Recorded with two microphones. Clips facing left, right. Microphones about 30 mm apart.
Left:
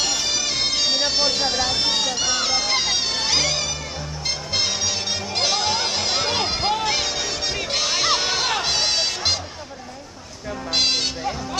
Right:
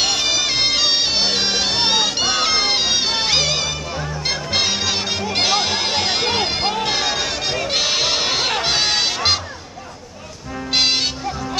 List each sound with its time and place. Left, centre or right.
0.0 s bagpipes: right
1.4 s music: right
10.7 s music: right